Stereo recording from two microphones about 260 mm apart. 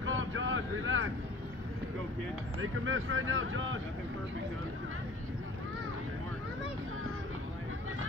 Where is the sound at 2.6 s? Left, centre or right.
Right.